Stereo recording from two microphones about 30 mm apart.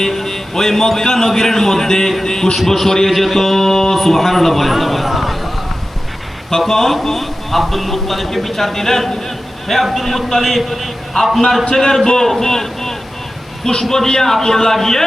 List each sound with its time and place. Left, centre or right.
0.0 s a man's voice: centre
3.1 s speech: centre
6.6 s speech: centre
11.7 s a man's voice: centre